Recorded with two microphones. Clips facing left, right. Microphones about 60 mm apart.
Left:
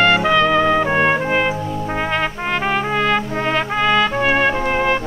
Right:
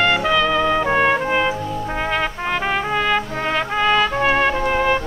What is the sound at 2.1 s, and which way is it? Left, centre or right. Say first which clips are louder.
Brass instrument: right 1 dB; centre.